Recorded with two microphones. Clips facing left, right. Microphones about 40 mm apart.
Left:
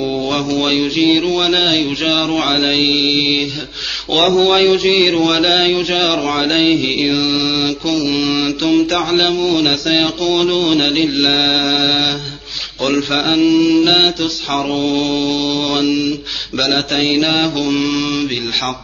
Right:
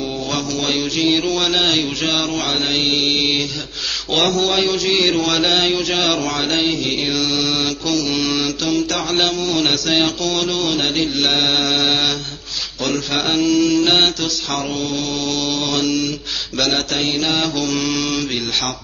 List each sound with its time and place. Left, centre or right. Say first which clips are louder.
0.3 s speech: left 4 dB; left
1.2 s mantra: left 3 dB; centre
1.5 s speech: left 3 dB; centre; by 9.0 s left
9.1 s speech: left 3 dB; centre
13.1 s speech: left 3 dB; left
15.2 s speech: left 4 dB; centre
16.9 s mantra: left 5 dB; left
17.6 s mantra: left 4 dB; centre